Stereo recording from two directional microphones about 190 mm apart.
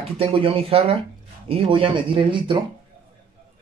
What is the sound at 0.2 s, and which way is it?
Speech, 30° right (ahead or behind).